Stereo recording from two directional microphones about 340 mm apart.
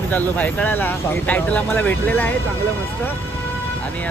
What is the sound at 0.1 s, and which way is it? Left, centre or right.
Speech, centre.